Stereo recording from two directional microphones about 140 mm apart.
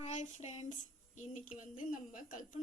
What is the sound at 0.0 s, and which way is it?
Child singing, 55° left (ahead or behind).